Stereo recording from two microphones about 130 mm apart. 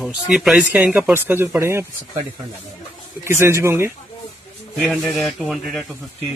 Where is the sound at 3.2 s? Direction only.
20° right (ahead or behind).